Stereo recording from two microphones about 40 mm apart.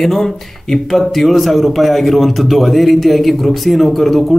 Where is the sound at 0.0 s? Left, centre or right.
Centre.